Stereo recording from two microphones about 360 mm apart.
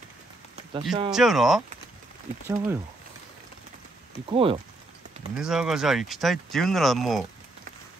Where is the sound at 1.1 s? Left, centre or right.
Centre.